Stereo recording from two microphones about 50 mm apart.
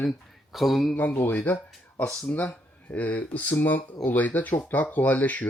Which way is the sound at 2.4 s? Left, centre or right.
Left.